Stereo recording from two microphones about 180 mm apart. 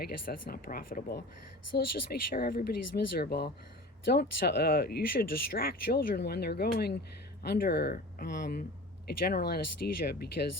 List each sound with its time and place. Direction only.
0.0 s speech: 55° left (ahead or behind)